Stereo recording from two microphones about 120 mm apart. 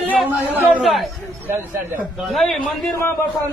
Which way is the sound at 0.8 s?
Centre (ahead or behind).